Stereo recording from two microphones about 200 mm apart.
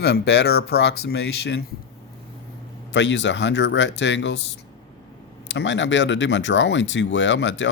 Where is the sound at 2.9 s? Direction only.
65° left (ahead or behind).